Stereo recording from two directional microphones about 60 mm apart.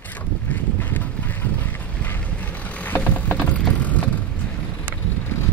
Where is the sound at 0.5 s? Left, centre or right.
Left.